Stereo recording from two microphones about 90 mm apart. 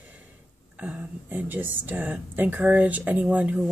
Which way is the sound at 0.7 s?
15° right (ahead or behind).